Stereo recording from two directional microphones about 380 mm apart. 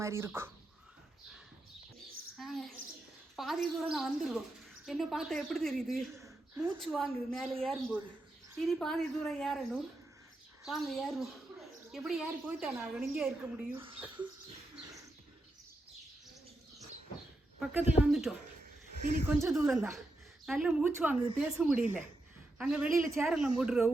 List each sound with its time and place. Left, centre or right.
0.0 s speech: centre
2.4 s a woman's voice: centre
17.6 s a woman's voice: centre
19.4 s a woman's voice: centre